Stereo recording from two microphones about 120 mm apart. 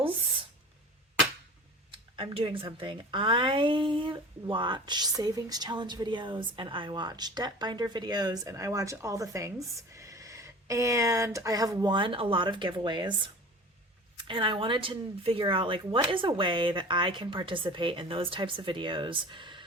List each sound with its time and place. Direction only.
1.9 s speech: 50° right (ahead or behind)